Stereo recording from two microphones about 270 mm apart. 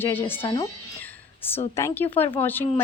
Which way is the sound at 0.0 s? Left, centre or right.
Centre.